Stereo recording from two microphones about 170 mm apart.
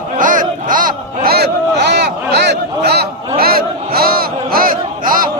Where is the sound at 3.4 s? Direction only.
60° right (ahead or behind).